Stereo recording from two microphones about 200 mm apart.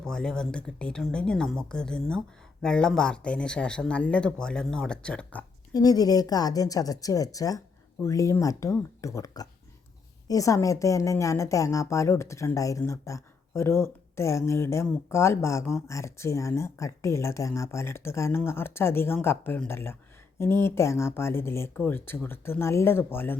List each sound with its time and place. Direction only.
0.0 s speech: 5° left (ahead or behind)
5.7 s a woman's voice: 20° left (ahead or behind)